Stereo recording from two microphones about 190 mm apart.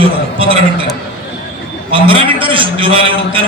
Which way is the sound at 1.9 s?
30° right (ahead or behind).